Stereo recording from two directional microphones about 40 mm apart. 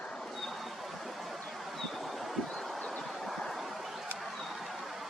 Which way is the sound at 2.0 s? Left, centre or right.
Centre.